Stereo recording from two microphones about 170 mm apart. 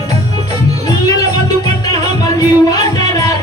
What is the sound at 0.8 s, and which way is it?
Music, 20° left (ahead or behind).